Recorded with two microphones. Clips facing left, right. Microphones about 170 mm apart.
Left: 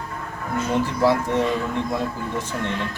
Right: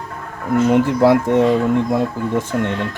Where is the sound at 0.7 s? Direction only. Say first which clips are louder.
Right 6 dB; 55° right (ahead or behind).